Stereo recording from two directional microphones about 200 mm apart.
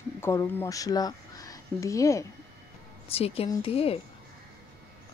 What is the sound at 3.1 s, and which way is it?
Speech, 30° left (ahead or behind).